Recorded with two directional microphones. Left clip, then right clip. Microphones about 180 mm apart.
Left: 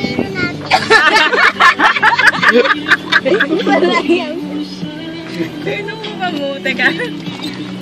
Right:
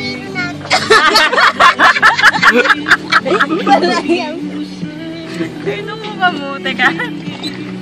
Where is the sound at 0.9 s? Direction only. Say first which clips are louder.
Right 1 dB; 50° right (ahead or behind).